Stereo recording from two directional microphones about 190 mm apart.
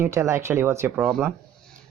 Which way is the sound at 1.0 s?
Centre (ahead or behind).